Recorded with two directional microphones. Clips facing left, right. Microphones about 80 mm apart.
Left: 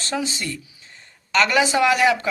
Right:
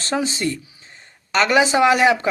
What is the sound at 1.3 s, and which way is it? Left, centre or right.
Speech, right.